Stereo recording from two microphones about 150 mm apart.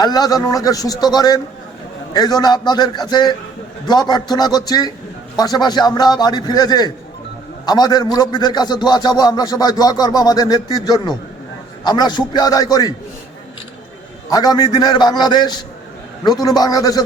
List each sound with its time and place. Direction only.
0.0 s a man's voice: 25° left (ahead or behind)
14.3 s a man's voice: 25° left (ahead or behind)